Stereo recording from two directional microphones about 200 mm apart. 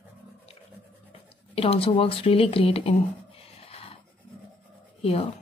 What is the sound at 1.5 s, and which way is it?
Speech, 30° left (ahead or behind).